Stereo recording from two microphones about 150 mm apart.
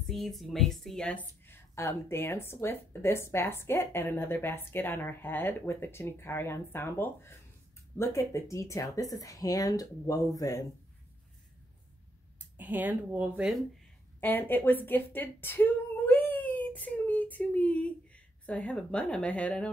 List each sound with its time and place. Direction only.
0.0 s speech: centre (ahead or behind)
1.4 s a woman's voice: 15° left (ahead or behind)
12.4 s speech: 10° right (ahead or behind)
14.2 s a woman's voice: 10° left (ahead or behind)